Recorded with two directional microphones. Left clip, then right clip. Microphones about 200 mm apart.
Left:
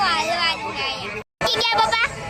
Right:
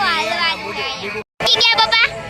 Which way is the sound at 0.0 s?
Centre (ahead or behind).